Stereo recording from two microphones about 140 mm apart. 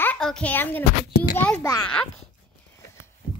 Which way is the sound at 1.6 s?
20° left (ahead or behind).